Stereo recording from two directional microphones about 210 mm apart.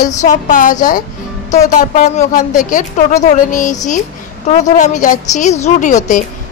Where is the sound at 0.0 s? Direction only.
35° left (ahead or behind).